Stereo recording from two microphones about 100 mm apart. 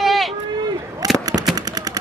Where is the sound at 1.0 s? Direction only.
35° right (ahead or behind).